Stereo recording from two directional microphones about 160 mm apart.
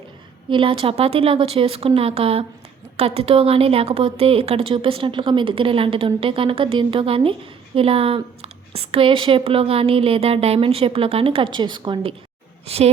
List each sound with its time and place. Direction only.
0.5 s speech: 30° right (ahead or behind)
12.6 s speech: 40° right (ahead or behind)